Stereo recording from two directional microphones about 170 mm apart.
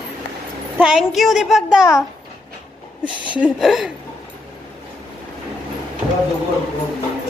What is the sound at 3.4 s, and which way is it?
Child singing, centre (ahead or behind).